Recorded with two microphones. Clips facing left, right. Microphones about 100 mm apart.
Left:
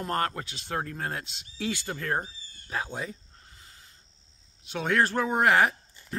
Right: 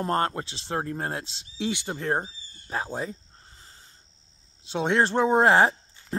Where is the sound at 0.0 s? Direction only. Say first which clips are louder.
Right 4 dB; 30° right (ahead or behind).